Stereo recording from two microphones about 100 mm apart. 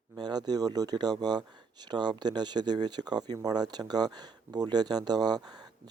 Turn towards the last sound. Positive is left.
turn(degrees=-45)  # may be behind; listen again after turning